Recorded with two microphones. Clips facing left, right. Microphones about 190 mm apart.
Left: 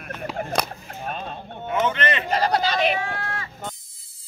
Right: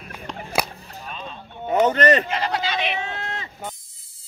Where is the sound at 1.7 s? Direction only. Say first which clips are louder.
Right 6 dB; 40° right (ahead or behind).